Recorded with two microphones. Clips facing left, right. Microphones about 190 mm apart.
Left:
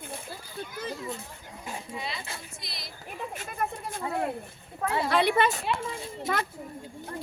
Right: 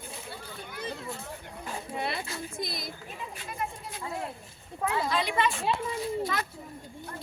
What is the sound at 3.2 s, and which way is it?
Speech, 50° left (ahead or behind).